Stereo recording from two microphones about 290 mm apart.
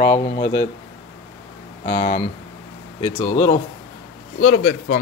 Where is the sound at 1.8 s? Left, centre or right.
Left.